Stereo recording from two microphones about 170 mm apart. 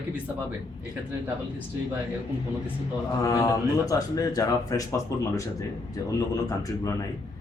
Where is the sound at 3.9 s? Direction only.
20° left (ahead or behind).